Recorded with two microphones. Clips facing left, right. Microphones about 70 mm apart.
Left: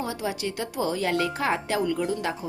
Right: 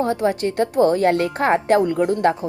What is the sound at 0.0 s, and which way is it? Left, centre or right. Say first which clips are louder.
Speech: right 10 dB; right.